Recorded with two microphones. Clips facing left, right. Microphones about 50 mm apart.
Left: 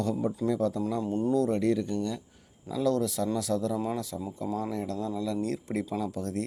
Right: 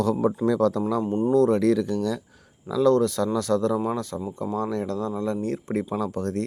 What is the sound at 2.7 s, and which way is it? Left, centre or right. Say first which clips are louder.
Speech: right 8 dB; right.